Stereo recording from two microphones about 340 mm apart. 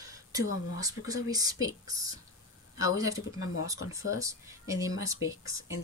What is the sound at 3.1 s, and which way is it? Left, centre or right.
Speech, left.